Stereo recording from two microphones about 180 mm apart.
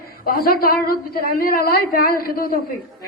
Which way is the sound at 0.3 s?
55° left (ahead or behind).